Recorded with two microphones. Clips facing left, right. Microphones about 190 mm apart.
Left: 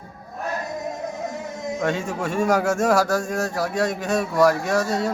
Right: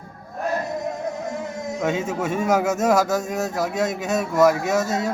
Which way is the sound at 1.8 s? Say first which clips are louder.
Right 2 dB; 5° right (ahead or behind).